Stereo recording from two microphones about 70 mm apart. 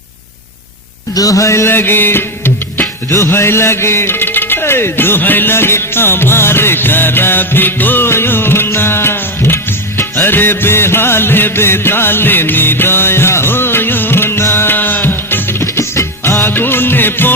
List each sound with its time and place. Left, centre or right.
1.1 s music: left
3.1 s speech: left
10.0 s music of bollywood: left
15.6 s music: left